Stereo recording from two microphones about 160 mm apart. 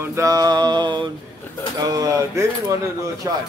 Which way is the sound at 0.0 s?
20° right (ahead or behind).